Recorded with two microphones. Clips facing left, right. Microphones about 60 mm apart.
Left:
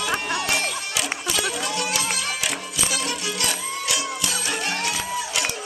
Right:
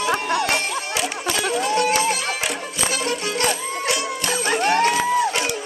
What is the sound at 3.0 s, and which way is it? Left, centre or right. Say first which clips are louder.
Music: right 5 dB; right.